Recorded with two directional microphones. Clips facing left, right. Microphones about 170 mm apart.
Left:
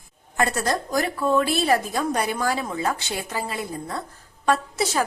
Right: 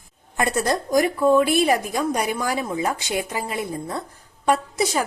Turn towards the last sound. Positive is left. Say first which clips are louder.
# right 1 dB
turn(degrees=-15)  # may be behind; listen again after turning